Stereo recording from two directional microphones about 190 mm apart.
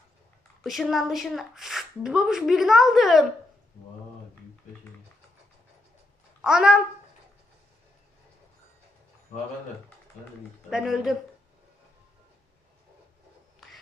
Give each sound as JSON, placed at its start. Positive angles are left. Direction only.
{"t": 0.6, "sound": "speech", "side_deg": 0}
{"t": 6.4, "sound": "a child's voice", "side_deg": -5}
{"t": 10.7, "sound": "speech", "side_deg": 0}
{"t": 13.6, "sound": "a sound", "side_deg": 0}